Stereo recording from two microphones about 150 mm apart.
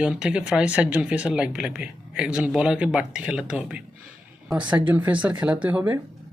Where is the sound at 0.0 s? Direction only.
5° right (ahead or behind).